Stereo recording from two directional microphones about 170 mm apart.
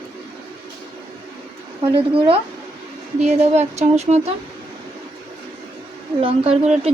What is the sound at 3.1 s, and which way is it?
A woman's voice, 40° right (ahead or behind).